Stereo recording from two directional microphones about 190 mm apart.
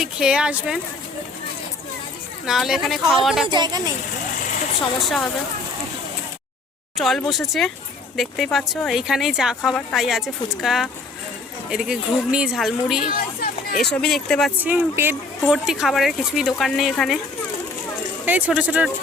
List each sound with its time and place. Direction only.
0.0 s speech: 5° right (ahead or behind)
2.5 s speech: centre (ahead or behind)
3.5 s speech: 20° right (ahead or behind)
4.9 s speech: centre (ahead or behind)
6.9 s speech: centre (ahead or behind)
13.0 s a sound: 50° left (ahead or behind)
13.8 s speech: centre (ahead or behind)
14.6 s speech: 10° right (ahead or behind)
18.3 s speech: 5° right (ahead or behind)